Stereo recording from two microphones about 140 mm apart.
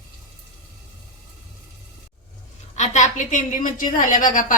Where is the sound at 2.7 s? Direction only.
60° left (ahead or behind).